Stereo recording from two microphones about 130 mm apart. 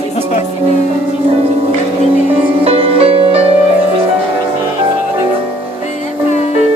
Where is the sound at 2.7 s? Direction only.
45° right (ahead or behind).